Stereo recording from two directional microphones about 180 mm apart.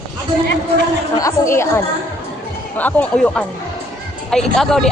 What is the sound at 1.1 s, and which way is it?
Speech, 20° left (ahead or behind).